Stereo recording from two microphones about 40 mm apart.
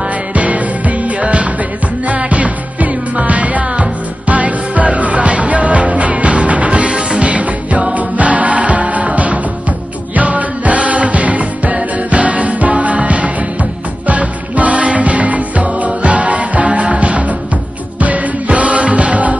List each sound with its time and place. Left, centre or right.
0.3 s music: right